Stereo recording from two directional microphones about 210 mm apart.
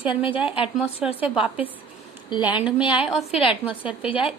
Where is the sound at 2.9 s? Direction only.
5° right (ahead or behind).